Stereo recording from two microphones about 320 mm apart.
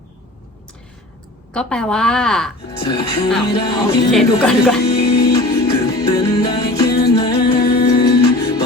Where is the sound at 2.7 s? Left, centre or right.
Centre.